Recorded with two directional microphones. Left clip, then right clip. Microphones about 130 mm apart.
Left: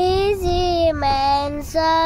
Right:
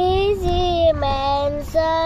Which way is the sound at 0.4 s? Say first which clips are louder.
Even; 30° left (ahead or behind).